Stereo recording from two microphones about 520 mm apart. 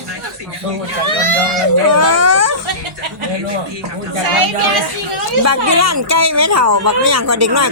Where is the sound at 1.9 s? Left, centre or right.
Right.